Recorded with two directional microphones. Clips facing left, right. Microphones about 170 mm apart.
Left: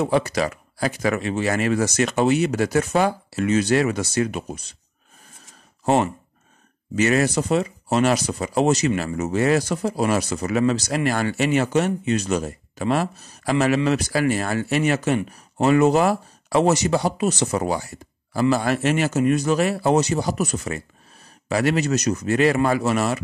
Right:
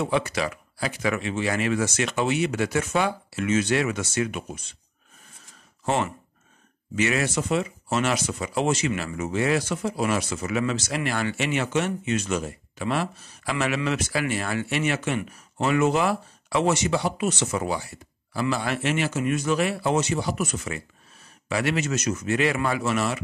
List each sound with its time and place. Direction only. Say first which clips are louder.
0.0 s speech: left 4 dB; 40° left (ahead or behind)
5.9 s speech: left 6 dB; 40° left (ahead or behind)